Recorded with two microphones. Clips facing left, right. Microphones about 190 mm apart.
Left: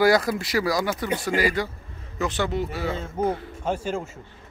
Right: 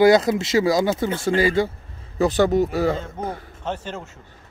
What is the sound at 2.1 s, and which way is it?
Speech, 40° right (ahead or behind).